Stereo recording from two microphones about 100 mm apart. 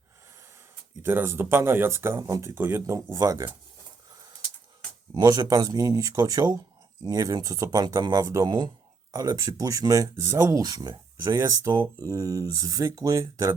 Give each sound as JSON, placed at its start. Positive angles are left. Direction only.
{"t": 1.0, "sound": "speech", "side_deg": -25}
{"t": 5.1, "sound": "speech", "side_deg": -35}